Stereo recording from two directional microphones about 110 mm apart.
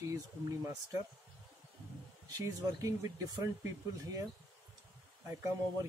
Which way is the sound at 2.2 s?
30° right (ahead or behind).